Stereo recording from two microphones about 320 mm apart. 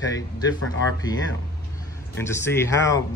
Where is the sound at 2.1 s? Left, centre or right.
Centre.